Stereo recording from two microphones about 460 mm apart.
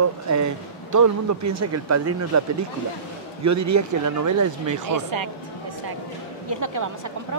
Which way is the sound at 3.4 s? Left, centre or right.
Right.